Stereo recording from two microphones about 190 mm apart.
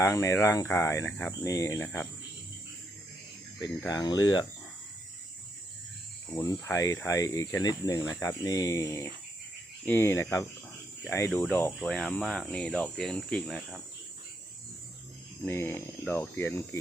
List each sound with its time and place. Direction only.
0.0 s speech: 15° left (ahead or behind)
3.8 s speech: 20° left (ahead or behind)
6.3 s speech: 20° left (ahead or behind); by 13.8 s centre (ahead or behind)
15.4 s speech: 10° left (ahead or behind)